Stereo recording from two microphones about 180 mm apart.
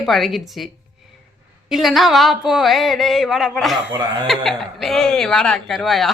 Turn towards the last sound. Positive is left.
turn(degrees=0)  # may be behind; listen again after turning